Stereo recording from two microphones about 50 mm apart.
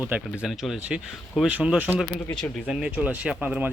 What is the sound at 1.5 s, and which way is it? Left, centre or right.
Speech, right.